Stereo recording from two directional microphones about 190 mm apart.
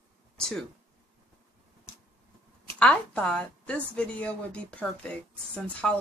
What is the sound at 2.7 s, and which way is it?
A woman's voice, 5° left (ahead or behind).